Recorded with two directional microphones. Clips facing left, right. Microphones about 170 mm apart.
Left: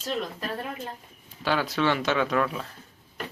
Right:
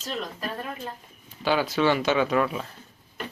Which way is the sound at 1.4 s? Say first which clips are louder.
Right 2 dB; centre (ahead or behind).